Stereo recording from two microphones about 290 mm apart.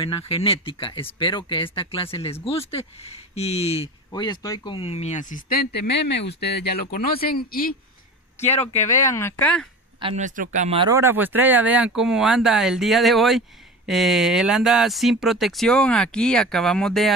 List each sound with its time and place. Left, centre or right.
0.3 s speech: centre
8.8 s speech: centre
9.9 s speech: right; by 17.1 s centre